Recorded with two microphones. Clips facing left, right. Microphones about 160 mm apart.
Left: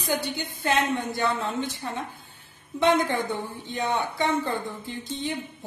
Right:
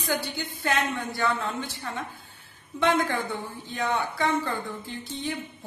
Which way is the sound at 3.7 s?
20° left (ahead or behind).